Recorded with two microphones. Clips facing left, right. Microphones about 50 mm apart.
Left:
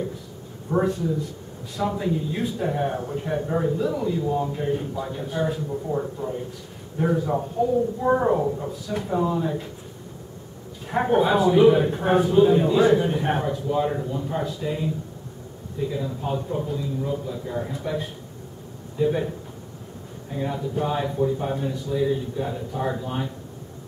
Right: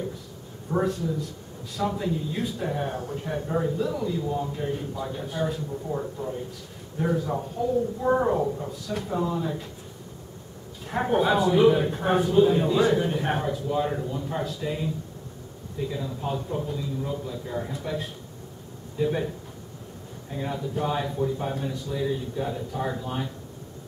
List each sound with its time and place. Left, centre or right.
0.7 s a man's voice: centre
7.6 s speech: left
8.0 s a man's voice: centre
10.9 s a man's voice: centre
15.9 s a man's voice: centre
20.3 s a man's voice: centre